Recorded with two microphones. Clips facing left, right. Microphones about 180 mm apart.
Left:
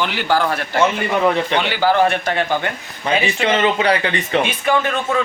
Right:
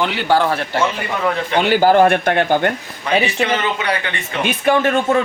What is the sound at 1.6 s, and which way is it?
Speech, 45° right (ahead or behind).